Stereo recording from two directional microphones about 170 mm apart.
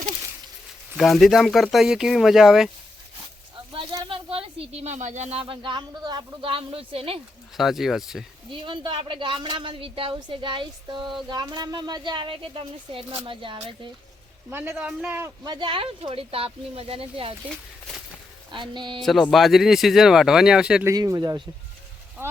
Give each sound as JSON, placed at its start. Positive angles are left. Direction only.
{"t": 0.9, "sound": "speech", "side_deg": 0}
{"t": 3.7, "sound": "speech", "side_deg": -30}
{"t": 7.5, "sound": "speech", "side_deg": 0}
{"t": 8.4, "sound": "speech", "side_deg": -30}
{"t": 14.5, "sound": "a man's voice", "side_deg": -10}
{"t": 15.4, "sound": "speech", "side_deg": -30}
{"t": 17.5, "sound": "speech", "side_deg": 0}
{"t": 18.5, "sound": "speech", "side_deg": -30}
{"t": 19.0, "sound": "speech", "side_deg": 0}
{"t": 20.8, "sound": "speech", "side_deg": -20}